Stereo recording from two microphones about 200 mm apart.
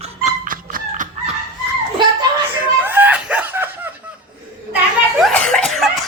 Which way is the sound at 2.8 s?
10° right (ahead or behind).